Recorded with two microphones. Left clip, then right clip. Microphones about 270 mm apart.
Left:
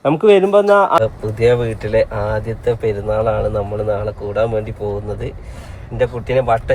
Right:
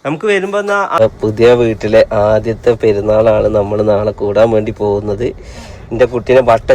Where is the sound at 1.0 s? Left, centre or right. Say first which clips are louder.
Right 6 dB; right.